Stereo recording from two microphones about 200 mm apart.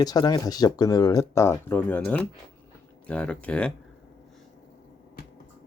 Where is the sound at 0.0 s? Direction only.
20° left (ahead or behind).